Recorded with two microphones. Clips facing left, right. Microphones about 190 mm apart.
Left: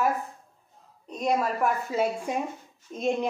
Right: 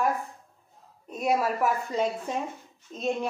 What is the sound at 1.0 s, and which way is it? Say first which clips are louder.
Speech: even; 5° right (ahead or behind).